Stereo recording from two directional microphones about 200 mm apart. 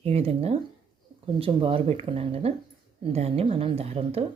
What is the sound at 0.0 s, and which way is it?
A woman's voice, 30° right (ahead or behind).